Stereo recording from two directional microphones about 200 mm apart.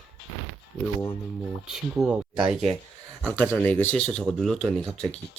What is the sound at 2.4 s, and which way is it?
Speech, 30° right (ahead or behind).